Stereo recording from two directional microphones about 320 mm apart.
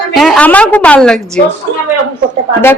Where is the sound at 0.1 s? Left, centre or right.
Centre.